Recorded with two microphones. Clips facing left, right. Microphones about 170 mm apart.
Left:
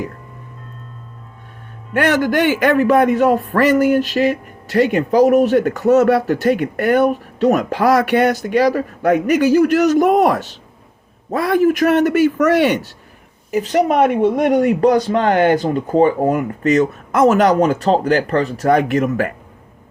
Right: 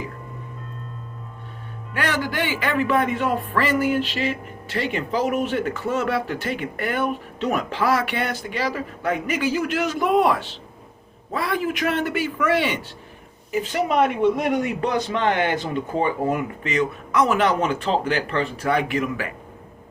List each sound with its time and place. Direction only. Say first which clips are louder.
1.9 s speech: left 10 dB; 50° left (ahead or behind)